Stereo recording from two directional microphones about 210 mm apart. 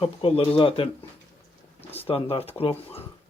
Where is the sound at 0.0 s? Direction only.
25° left (ahead or behind).